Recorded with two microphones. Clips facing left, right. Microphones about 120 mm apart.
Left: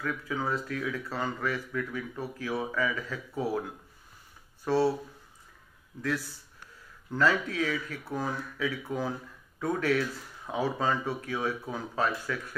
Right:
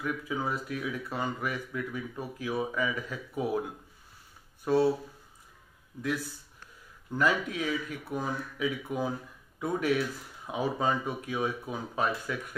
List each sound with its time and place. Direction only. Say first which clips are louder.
0.0 s speech: even; 15° right (ahead or behind)
4.6 s speech: right 1 dB; 20° right (ahead or behind)
7.1 s speech: left 1 dB; 15° right (ahead or behind)